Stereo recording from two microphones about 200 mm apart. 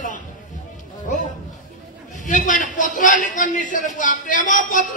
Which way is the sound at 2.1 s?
40° left (ahead or behind).